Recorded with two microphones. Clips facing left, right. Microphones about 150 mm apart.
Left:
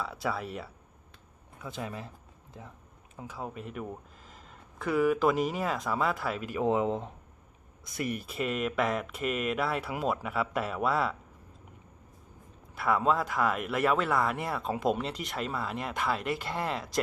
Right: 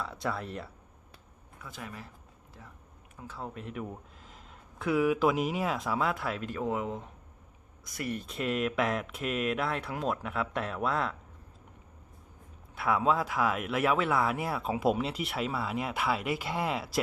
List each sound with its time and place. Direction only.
0.0 s speech: 5° left (ahead or behind)
1.6 s speech: 25° left (ahead or behind)
3.2 s speech: 15° left (ahead or behind)
6.6 s speech: 25° left (ahead or behind); by 11.2 s 5° left (ahead or behind)
12.7 s speech: centre (ahead or behind)